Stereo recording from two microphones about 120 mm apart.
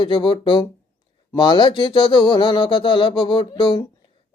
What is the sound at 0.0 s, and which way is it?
Speech, 45° left (ahead or behind).